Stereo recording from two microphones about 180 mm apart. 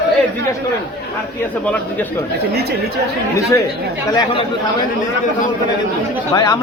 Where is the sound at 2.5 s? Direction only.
60° right (ahead or behind).